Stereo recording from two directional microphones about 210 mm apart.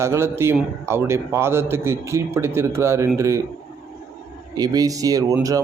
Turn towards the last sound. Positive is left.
turn(degrees=-15)  # may be behind; listen again after turning